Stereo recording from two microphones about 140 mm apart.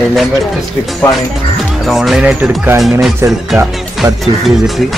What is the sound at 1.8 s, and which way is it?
Speech, centre (ahead or behind).